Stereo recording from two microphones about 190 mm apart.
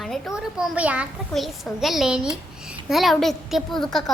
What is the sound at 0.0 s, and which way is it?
A woman's voice, centre (ahead or behind).